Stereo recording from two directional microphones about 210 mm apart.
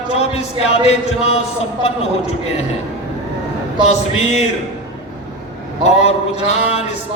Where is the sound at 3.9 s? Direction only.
30° left (ahead or behind).